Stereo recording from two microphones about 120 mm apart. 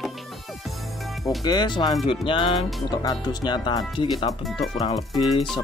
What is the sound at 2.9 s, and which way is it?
Speech, 35° left (ahead or behind).